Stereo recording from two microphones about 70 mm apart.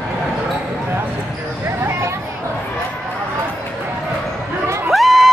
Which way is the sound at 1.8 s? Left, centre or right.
Right.